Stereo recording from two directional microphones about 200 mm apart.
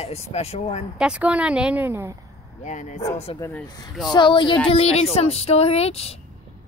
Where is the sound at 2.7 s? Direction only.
35° left (ahead or behind).